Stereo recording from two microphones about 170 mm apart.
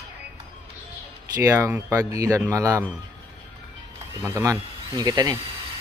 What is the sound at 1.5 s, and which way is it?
Speech, 15° right (ahead or behind).